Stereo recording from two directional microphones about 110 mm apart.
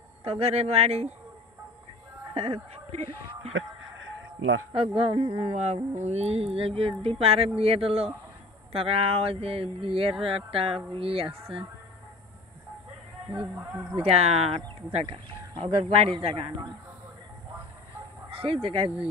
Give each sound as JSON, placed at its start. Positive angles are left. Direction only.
{"t": 0.2, "sound": "speech", "side_deg": -70}
{"t": 2.3, "sound": "speech", "side_deg": -60}
{"t": 4.7, "sound": "speech", "side_deg": -60}
{"t": 5.5, "sound": "speech", "side_deg": -80}
{"t": 13.9, "sound": "speech", "side_deg": -65}
{"t": 18.3, "sound": "speech", "side_deg": -60}